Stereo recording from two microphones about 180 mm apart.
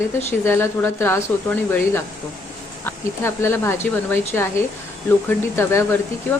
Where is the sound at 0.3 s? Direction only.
15° left (ahead or behind).